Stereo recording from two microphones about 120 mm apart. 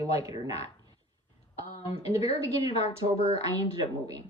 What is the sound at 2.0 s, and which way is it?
Speech, 60° left (ahead or behind).